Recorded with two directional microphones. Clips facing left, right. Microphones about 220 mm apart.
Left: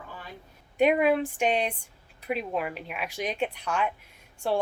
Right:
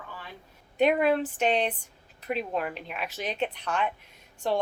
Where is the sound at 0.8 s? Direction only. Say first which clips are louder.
Left 1 dB; 10° left (ahead or behind).